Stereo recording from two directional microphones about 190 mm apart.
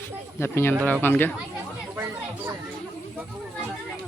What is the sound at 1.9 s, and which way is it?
Chatter, 10° right (ahead or behind).